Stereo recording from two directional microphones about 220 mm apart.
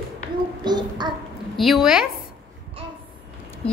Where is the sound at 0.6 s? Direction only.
20° right (ahead or behind).